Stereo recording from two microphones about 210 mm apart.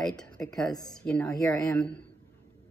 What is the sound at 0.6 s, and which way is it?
Speech, 20° left (ahead or behind).